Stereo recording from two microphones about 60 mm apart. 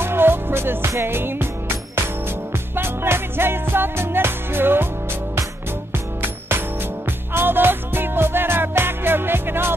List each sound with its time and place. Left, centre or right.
0.0 s music: right
2.7 s music: right
7.3 s music: right